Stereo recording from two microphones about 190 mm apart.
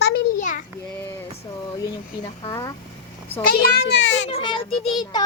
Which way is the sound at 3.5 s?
60° left (ahead or behind).